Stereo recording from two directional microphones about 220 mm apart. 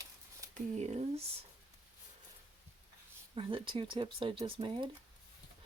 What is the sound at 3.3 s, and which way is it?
Speech, 25° right (ahead or behind).